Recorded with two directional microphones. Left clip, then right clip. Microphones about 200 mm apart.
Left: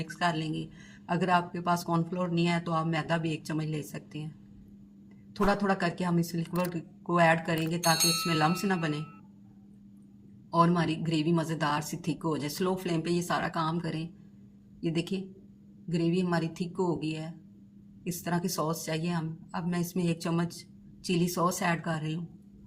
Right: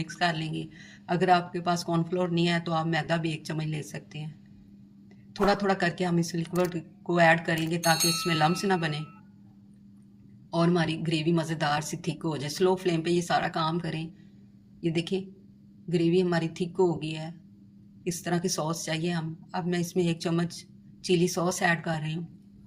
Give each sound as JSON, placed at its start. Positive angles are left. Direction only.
{"t": 0.0, "sound": "speech", "side_deg": -30}
{"t": 5.5, "sound": "speech", "side_deg": -25}
{"t": 7.8, "sound": "speech", "side_deg": 0}
{"t": 8.6, "sound": "speech", "side_deg": -25}
{"t": 10.5, "sound": "speech", "side_deg": -30}